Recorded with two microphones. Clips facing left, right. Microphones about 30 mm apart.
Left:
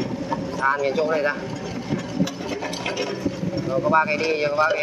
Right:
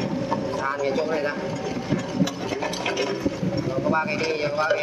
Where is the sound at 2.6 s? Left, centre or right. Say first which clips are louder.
Right 2 dB; centre.